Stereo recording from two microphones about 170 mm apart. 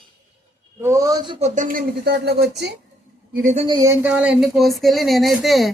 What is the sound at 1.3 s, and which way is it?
Speech, 45° right (ahead or behind).